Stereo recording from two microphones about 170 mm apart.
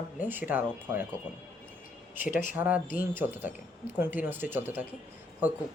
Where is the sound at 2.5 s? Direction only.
10° right (ahead or behind).